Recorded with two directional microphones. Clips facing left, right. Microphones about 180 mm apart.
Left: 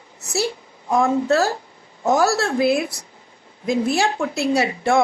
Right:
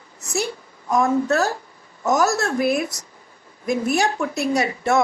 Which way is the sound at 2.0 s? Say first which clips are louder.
Left 1 dB; 30° left (ahead or behind).